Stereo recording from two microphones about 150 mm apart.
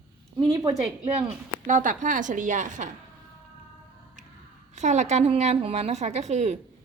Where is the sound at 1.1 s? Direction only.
50° right (ahead or behind).